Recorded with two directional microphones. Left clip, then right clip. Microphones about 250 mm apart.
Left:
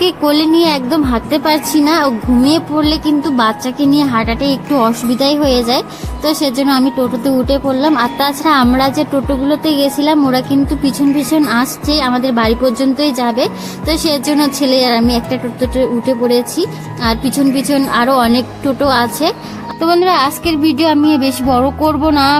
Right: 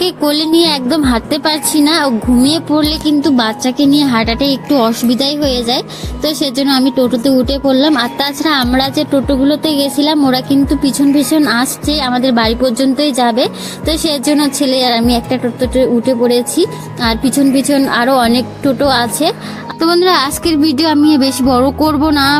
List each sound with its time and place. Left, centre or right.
0.0 s speech: centre